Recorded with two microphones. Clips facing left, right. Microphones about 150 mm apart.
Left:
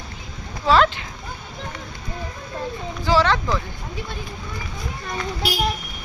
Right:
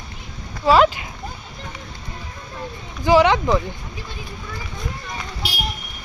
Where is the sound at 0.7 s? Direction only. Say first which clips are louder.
Right 2 dB; 10° right (ahead or behind).